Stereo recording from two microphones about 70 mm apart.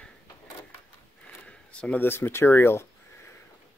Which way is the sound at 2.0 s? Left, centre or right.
Left.